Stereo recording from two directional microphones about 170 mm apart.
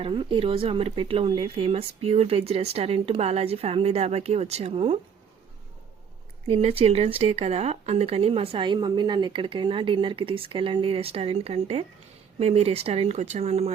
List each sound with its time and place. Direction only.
0.0 s speech: 30° right (ahead or behind)
6.5 s speech: 35° right (ahead or behind)